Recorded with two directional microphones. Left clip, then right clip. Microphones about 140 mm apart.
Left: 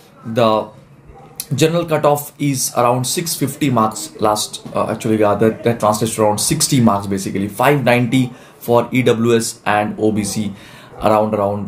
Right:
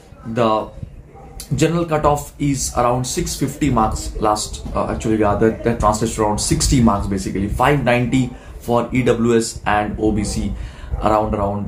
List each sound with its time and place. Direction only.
0.3 s speech: 40° left (ahead or behind)